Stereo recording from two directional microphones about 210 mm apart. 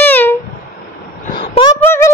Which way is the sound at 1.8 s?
10° left (ahead or behind).